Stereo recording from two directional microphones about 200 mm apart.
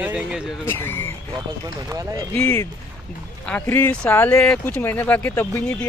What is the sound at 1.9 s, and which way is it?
Speech, 15° right (ahead or behind).